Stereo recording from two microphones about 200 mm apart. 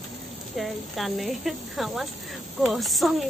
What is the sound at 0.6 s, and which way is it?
Speech, centre (ahead or behind).